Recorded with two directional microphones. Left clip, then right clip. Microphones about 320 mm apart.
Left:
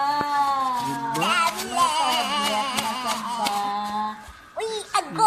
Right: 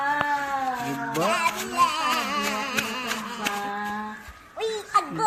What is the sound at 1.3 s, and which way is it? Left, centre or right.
Music, left.